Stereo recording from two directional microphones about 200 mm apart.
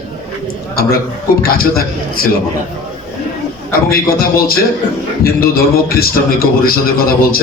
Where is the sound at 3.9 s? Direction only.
50° left (ahead or behind).